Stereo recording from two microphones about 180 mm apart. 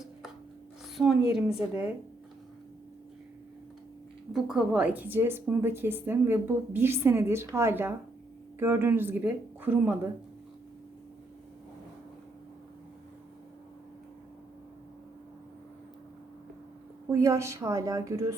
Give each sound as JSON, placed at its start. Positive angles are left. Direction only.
{"t": 0.9, "sound": "a woman's voice", "side_deg": 0}
{"t": 4.3, "sound": "a woman's voice", "side_deg": -5}
{"t": 17.1, "sound": "a woman's voice", "side_deg": -15}